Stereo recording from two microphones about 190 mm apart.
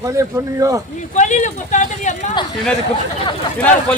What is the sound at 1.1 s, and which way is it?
Speech, 40° left (ahead or behind).